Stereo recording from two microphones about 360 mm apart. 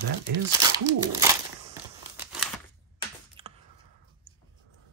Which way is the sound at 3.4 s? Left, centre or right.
Centre.